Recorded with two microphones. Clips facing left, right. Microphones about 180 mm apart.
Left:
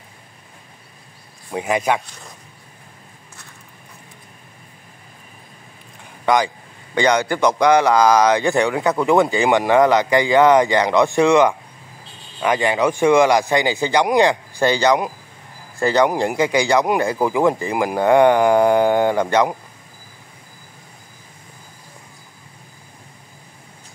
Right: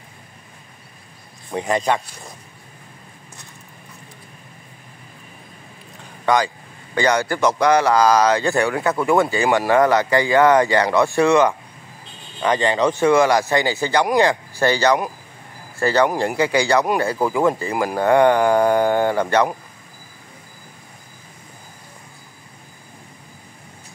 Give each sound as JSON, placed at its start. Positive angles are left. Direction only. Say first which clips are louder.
{"t": 1.5, "sound": "speech", "louder": "even", "side_deg": 5}
{"t": 6.2, "sound": "speech", "louder": "left 1 dB", "side_deg": 15}